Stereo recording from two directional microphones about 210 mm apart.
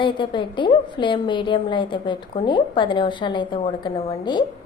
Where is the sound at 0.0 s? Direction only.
20° left (ahead or behind).